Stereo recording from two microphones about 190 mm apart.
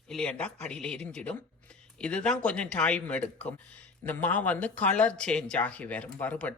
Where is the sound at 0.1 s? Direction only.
5° left (ahead or behind).